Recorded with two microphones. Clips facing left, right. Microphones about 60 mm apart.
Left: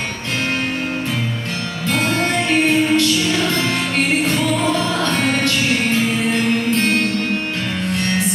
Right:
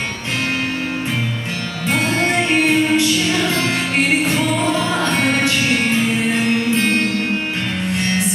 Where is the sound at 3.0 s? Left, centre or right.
Centre.